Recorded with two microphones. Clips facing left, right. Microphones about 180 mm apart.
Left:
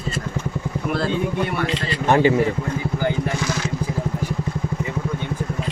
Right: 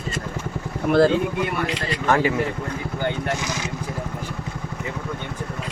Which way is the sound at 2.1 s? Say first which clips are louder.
Left 4 dB; 25° left (ahead or behind).